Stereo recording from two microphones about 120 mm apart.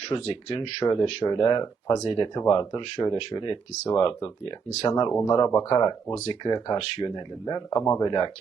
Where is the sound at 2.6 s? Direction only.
40° left (ahead or behind).